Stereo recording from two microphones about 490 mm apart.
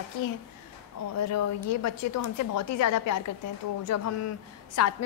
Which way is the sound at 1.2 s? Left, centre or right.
Left.